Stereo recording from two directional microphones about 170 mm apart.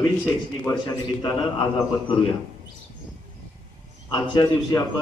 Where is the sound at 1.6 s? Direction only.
30° left (ahead or behind).